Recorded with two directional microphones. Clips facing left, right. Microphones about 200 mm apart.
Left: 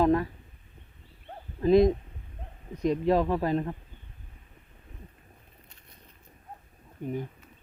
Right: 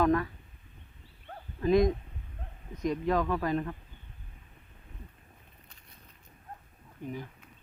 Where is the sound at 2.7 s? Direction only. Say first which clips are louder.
Left 4 dB; 35° left (ahead or behind).